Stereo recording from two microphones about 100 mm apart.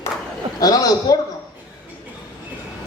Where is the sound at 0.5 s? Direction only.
40° left (ahead or behind).